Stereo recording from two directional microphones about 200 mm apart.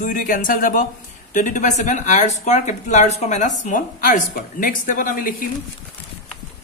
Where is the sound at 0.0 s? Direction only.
40° left (ahead or behind).